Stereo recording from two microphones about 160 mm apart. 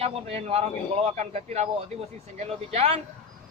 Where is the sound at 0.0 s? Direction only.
40° right (ahead or behind).